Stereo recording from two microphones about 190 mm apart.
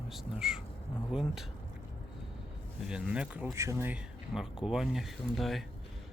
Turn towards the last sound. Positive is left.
turn(degrees=0)  # may be behind; listen again after turning